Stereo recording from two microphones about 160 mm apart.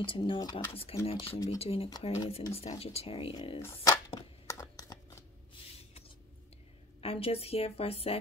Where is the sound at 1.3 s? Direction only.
25° left (ahead or behind).